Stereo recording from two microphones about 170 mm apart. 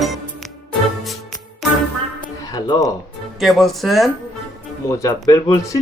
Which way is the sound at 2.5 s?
20° left (ahead or behind).